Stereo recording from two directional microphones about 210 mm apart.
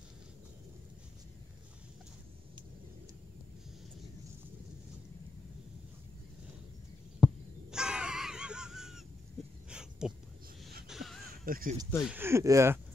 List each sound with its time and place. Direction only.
7.2 s crow: centre (ahead or behind)
9.7 s a sound: 5° right (ahead or behind)
11.4 s speech: 45° right (ahead or behind)
12.0 s speech: 10° right (ahead or behind)